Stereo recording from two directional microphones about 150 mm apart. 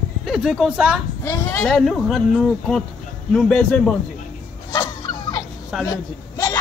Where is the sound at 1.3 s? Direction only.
20° left (ahead or behind).